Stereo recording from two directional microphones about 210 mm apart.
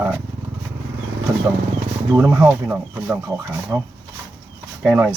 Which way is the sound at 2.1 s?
15° right (ahead or behind).